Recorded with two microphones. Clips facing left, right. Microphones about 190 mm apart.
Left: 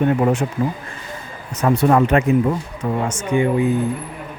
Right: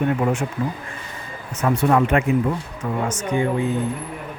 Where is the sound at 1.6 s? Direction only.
40° left (ahead or behind).